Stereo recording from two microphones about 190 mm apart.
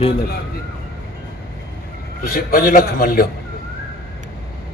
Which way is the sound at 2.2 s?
50° left (ahead or behind).